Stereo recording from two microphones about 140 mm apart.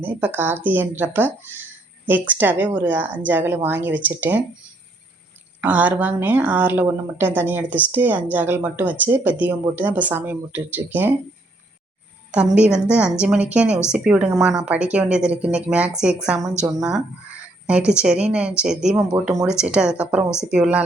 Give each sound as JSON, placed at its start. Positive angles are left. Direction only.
{"t": 0.0, "sound": "speech", "side_deg": -15}
{"t": 5.5, "sound": "speech", "side_deg": -10}
{"t": 12.3, "sound": "speech", "side_deg": -10}
{"t": 17.7, "sound": "speech", "side_deg": -5}